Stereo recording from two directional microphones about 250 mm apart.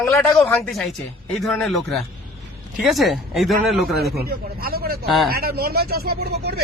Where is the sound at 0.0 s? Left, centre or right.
Centre.